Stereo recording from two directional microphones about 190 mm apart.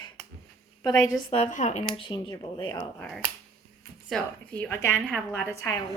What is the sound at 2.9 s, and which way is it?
A woman's voice, 5° left (ahead or behind).